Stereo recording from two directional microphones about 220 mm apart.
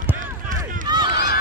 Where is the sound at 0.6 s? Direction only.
20° right (ahead or behind).